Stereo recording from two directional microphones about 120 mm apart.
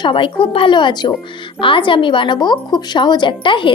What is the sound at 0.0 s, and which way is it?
Speech, 45° left (ahead or behind).